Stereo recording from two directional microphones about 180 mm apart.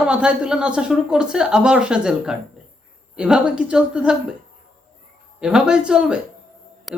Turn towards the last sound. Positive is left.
turn(degrees=0)  # may be behind; listen again after turning